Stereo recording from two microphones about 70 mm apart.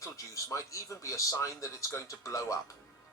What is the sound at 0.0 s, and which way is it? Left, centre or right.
Speech, left.